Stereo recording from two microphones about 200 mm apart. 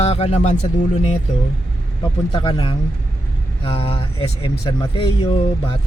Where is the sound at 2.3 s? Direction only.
25° left (ahead or behind).